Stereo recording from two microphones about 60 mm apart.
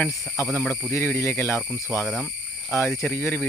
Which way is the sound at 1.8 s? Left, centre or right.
Left.